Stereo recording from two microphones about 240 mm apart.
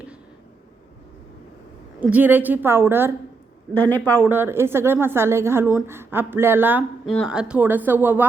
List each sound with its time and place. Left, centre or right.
2.0 s a woman's voice: centre
3.8 s speech: centre
4.3 s a woman's voice: centre